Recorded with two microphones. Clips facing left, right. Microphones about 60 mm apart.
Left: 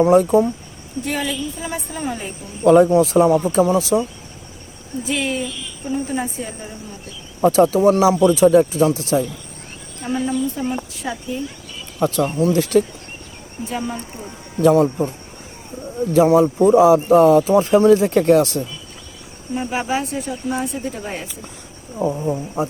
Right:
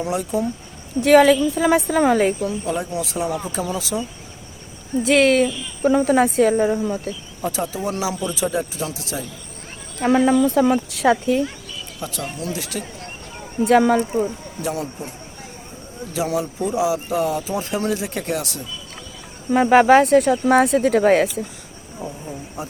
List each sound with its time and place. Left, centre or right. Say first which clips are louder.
0.0 s speech: left 10 dB; left
1.0 s a woman's voice: right 12 dB; right
2.6 s speech: left 14 dB; left
2.9 s speech: left 11 dB; left
5.0 s speech: right 8 dB; right
7.8 s speech: left 11 dB; left
10.0 s speech: right 6 dB; right
11.9 s speech: left 12 dB; left
13.7 s speech: right 12 dB; right
14.6 s speech: left 13 dB; left
16.1 s speech: left 10 dB; left
19.5 s speech: right 10 dB; right
22.2 s speech: left 10 dB; left